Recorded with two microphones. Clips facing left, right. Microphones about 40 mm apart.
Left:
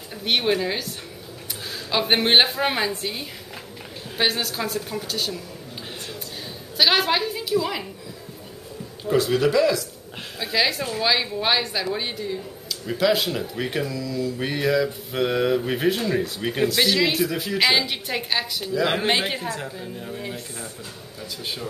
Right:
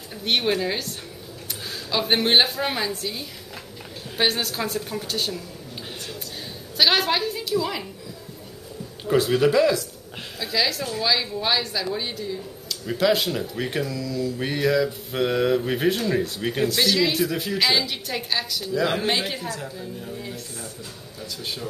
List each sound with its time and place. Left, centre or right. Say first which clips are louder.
0.2 s speech: left 1 dB; centre
1.9 s a woman's voice: left 1 dB; centre
4.2 s speech: even; centre
6.8 s a woman's voice: left 1 dB; centre
9.0 s a man's voice: right 1 dB; centre
10.4 s speech: left 2 dB; centre
12.6 s a woman's voice: even; centre
17.2 s speech: even; centre
17.6 s speech: left 3 dB; centre